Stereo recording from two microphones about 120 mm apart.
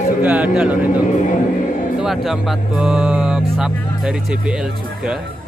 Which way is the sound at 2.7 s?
5° right (ahead or behind).